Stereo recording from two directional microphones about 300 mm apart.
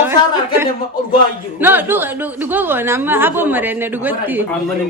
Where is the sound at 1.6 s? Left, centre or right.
Centre.